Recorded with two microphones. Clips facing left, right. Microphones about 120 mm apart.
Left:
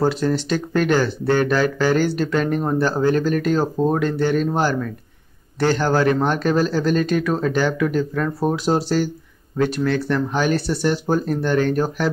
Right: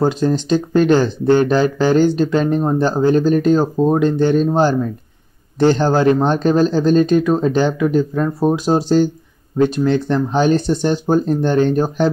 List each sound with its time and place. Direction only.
0.0 s speech: 20° right (ahead or behind)